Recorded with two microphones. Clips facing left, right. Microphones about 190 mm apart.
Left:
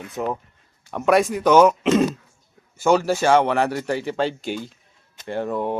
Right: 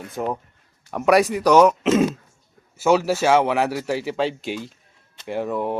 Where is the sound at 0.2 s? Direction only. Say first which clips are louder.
Even; 5° right (ahead or behind).